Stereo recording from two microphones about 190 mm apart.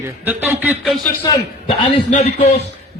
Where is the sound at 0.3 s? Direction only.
10° right (ahead or behind).